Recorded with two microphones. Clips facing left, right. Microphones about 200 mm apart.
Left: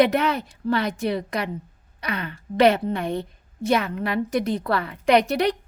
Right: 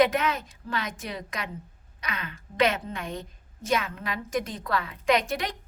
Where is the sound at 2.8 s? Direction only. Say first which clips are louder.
Left 9 dB; 65° left (ahead or behind).